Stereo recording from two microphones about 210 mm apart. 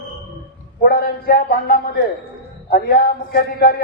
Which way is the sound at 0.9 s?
45° left (ahead or behind).